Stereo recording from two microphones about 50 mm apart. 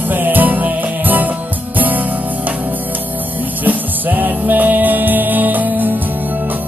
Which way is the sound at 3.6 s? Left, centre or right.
Right.